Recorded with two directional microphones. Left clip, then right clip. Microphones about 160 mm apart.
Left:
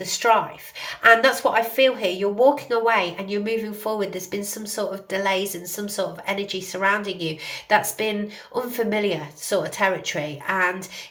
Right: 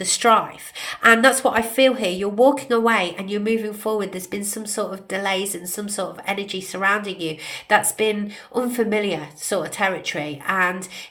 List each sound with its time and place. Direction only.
0.0 s speech: 35° right (ahead or behind)